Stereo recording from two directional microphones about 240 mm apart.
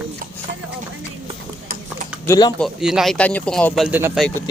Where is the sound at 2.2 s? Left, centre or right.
Centre.